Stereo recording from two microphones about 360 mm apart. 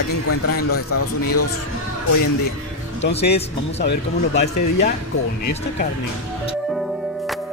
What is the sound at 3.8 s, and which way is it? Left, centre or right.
A man's voice, left.